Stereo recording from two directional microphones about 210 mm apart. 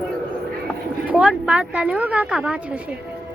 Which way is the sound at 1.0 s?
5° right (ahead or behind).